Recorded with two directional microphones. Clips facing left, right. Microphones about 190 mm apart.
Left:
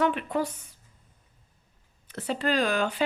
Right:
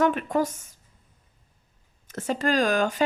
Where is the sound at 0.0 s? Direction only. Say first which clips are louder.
Right 3 dB; 45° right (ahead or behind).